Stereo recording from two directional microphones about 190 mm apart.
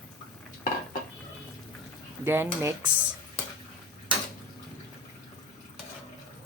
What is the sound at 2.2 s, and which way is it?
Speech, 10° right (ahead or behind).